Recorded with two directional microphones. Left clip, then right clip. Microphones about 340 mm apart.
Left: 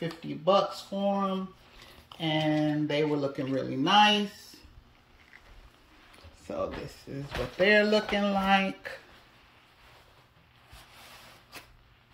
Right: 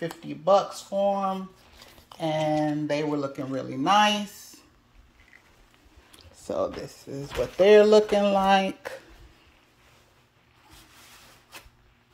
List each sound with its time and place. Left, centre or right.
0.0 s speech: centre
2.5 s speech: centre
6.4 s speech: centre